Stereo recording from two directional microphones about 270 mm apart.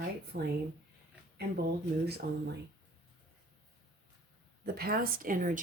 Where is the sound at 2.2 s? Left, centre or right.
Right.